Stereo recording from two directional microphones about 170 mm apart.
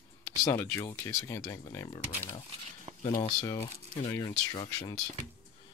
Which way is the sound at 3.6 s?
20° left (ahead or behind).